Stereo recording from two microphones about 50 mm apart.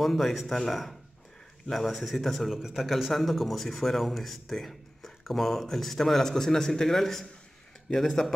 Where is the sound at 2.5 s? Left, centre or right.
Centre.